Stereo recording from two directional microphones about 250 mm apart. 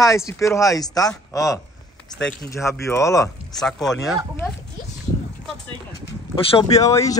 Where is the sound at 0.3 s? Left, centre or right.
Centre.